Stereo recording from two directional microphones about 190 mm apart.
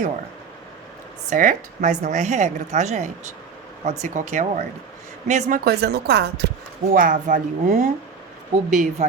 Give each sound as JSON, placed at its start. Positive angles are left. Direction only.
{"t": 1.3, "sound": "a woman's voice", "side_deg": -40}
{"t": 6.9, "sound": "a woman's voice", "side_deg": -45}